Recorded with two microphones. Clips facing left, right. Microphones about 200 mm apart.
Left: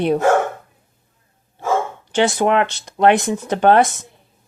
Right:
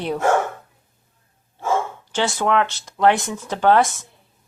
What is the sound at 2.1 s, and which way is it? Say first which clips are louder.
Speech: left 5 dB; 20° left (ahead or behind).